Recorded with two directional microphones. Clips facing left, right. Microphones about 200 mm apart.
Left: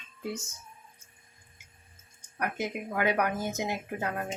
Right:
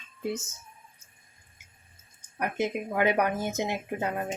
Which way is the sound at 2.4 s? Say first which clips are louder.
Right 4 dB; 25° right (ahead or behind).